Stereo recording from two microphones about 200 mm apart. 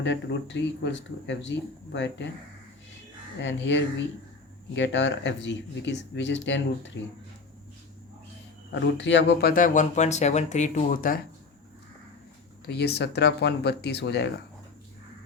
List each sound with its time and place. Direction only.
0.0 s speech: 65° left (ahead or behind)
3.4 s speech: 65° left (ahead or behind)
8.7 s speech: 65° left (ahead or behind); by 11.2 s 45° left (ahead or behind)
12.6 s speech: 55° left (ahead or behind)